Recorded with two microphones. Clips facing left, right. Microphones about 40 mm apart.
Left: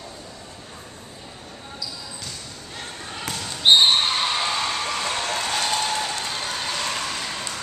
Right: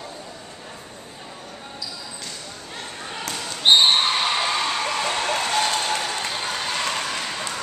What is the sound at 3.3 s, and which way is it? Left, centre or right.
Basketball bounce, centre.